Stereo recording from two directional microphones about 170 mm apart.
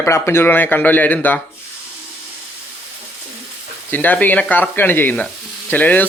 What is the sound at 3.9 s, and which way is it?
Speech, 10° left (ahead or behind).